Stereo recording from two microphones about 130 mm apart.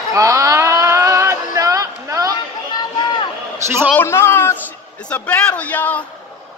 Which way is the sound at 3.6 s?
20° right (ahead or behind).